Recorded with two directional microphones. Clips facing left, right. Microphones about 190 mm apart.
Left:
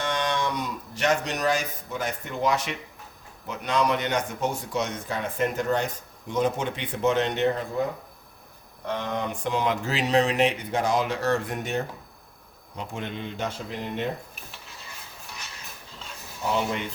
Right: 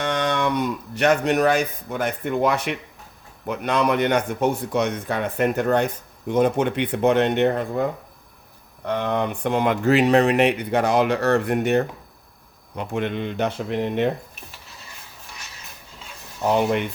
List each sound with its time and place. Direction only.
0.0 s speech: 60° right (ahead or behind)
8.9 s speech: 60° right (ahead or behind)